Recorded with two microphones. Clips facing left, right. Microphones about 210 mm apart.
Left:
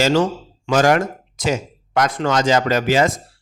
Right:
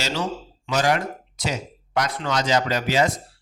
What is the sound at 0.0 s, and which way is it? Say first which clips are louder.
Speech: left 10 dB; 50° left (ahead or behind).